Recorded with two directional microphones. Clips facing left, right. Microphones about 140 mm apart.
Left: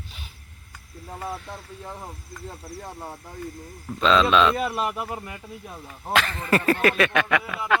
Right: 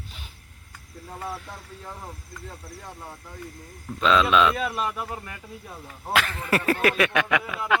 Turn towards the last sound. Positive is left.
turn(degrees=-5)  # may be behind; listen again after turning